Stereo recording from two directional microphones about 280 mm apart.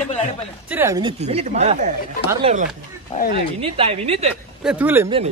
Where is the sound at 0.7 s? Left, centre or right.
Centre; by 1.9 s right.